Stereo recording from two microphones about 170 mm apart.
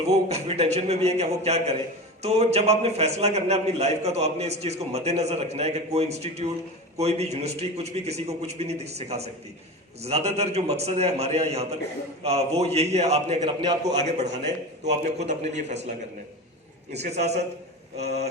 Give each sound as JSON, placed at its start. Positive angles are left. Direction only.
{"t": 0.0, "sound": "a man's voice", "side_deg": -40}
{"t": 16.9, "sound": "a man's voice", "side_deg": -40}